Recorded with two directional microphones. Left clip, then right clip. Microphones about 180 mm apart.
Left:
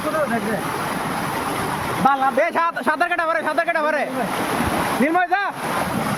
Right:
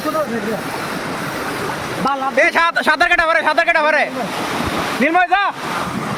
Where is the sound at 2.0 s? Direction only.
5° left (ahead or behind).